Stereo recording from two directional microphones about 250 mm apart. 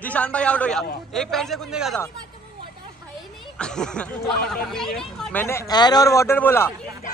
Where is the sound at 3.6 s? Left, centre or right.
Centre.